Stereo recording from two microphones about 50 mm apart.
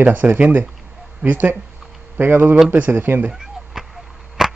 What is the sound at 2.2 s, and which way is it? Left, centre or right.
Speech, right.